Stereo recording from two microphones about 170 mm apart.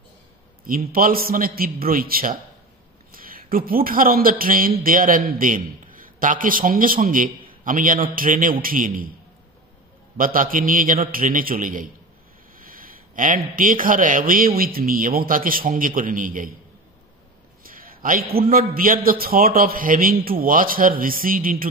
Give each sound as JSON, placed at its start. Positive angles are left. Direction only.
{"t": 0.7, "sound": "a man's voice", "side_deg": -55}
{"t": 10.1, "sound": "a man's voice", "side_deg": -55}
{"t": 17.6, "sound": "a sound", "side_deg": -55}
{"t": 18.5, "sound": "a man's voice", "side_deg": -55}